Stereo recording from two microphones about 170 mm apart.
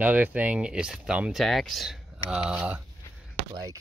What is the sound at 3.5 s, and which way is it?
Speech, 20° right (ahead or behind).